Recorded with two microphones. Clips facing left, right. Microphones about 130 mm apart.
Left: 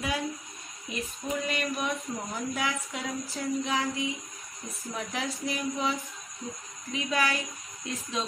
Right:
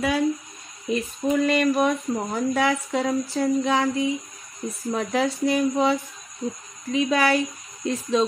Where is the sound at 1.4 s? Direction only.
90° right.